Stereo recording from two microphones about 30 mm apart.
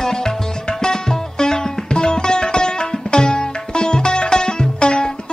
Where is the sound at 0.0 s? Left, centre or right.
Centre.